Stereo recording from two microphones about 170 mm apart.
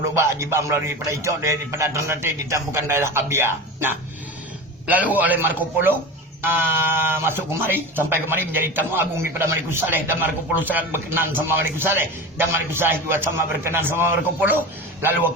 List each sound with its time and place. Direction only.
0.2 s speech: 15° right (ahead or behind)